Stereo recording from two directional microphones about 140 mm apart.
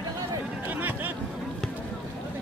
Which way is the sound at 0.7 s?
15° right (ahead or behind).